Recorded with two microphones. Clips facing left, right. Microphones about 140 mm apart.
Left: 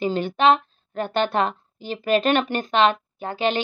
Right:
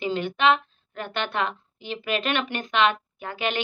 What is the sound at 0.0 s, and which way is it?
A woman's voice, 40° left (ahead or behind).